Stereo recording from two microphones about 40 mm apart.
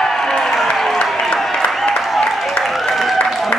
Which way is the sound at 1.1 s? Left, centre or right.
Centre.